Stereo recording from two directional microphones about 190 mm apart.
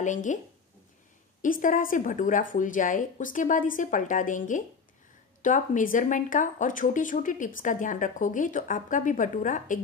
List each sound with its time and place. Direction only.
0.0 s speech: 40° left (ahead or behind)
1.4 s speech: 45° left (ahead or behind)